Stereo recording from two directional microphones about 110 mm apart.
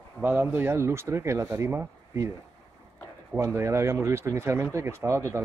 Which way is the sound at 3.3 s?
25° right (ahead or behind).